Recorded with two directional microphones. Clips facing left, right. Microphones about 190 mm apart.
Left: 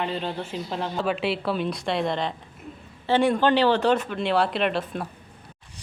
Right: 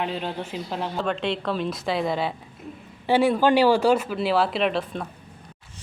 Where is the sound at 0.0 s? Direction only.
5° right (ahead or behind).